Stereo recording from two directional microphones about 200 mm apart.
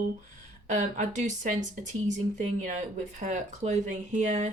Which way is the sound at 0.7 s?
35° right (ahead or behind).